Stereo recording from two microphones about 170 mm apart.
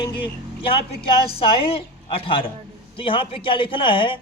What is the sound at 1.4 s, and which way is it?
A woman's voice, 35° left (ahead or behind).